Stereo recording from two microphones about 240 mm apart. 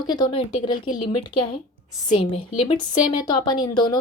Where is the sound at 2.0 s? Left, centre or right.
Left.